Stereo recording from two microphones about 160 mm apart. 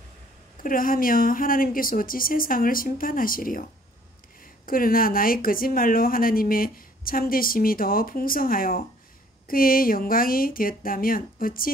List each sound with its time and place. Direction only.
0.6 s speech: 60° left (ahead or behind)
4.6 s speech: 65° left (ahead or behind)